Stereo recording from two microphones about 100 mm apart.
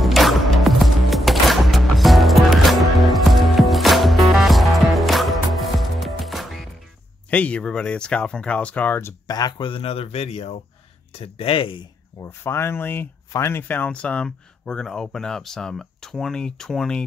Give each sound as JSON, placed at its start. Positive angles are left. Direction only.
{"t": 0.0, "sound": "music", "side_deg": 0}
{"t": 7.2, "sound": "speech", "side_deg": 15}
{"t": 9.6, "sound": "speech", "side_deg": 60}
{"t": 11.1, "sound": "speech", "side_deg": 70}
{"t": 12.2, "sound": "speech", "side_deg": 25}